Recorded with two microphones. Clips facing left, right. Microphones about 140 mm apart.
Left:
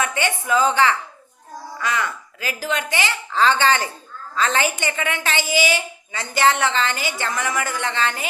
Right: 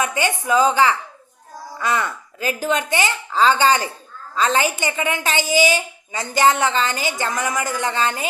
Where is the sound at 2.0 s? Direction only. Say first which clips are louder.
Right 1 dB; 25° right (ahead or behind).